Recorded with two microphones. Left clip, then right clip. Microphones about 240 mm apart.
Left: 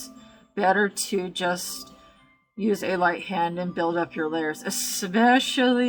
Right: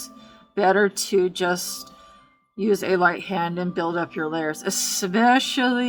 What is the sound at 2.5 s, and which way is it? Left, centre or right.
Speech, centre.